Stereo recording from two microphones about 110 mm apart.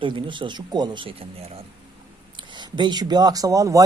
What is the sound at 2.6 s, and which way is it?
Speech, 40° right (ahead or behind).